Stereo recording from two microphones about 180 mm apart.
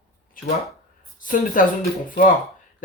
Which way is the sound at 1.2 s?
50° left (ahead or behind).